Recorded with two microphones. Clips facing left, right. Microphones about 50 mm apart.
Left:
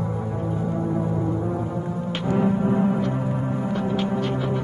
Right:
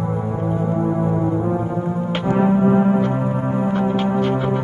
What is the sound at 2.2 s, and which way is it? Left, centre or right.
Music, right.